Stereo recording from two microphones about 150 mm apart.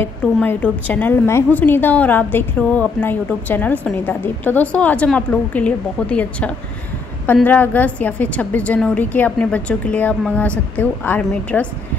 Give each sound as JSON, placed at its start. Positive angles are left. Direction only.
{"t": 0.0, "sound": "a woman's voice", "side_deg": 10}